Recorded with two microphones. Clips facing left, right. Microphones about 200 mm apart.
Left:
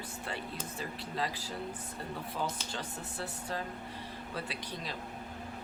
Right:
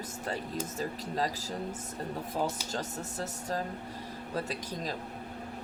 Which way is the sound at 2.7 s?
40° right (ahead or behind).